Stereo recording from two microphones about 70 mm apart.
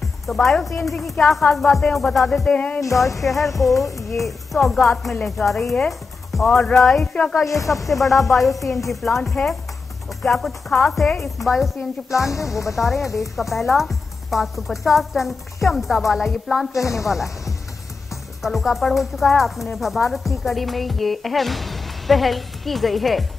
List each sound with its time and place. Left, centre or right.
0.3 s speech: centre
2.4 s music: centre
3.2 s speech: centre
12.1 s speech: left
12.7 s speech: centre